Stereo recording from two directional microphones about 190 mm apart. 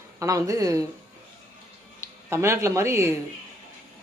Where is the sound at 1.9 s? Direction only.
15° right (ahead or behind).